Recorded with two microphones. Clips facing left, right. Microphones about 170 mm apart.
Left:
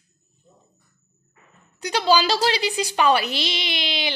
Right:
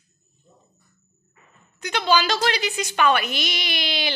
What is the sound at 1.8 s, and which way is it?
A woman's voice, 35° left (ahead or behind).